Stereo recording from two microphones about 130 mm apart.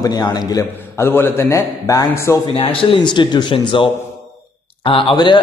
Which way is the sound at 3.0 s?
35° left (ahead or behind).